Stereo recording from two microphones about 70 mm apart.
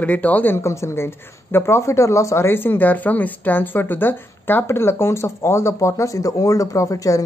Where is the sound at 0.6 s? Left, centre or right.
Left.